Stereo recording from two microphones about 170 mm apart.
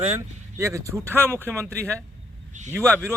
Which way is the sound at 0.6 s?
15° right (ahead or behind).